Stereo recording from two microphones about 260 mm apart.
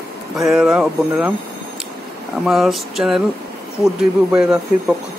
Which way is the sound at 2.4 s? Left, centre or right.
Centre.